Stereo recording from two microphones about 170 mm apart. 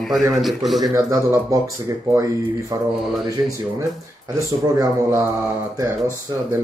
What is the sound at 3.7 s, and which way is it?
Speech, 20° right (ahead or behind).